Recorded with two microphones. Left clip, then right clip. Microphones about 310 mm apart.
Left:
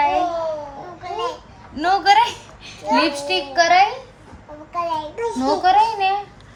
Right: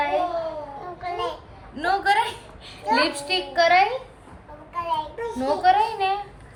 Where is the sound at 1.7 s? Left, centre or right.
Centre.